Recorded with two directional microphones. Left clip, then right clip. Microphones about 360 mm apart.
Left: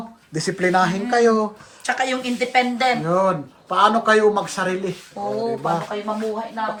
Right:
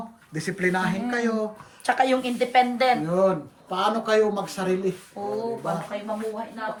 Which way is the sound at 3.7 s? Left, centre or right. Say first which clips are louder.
Left 6 dB; centre.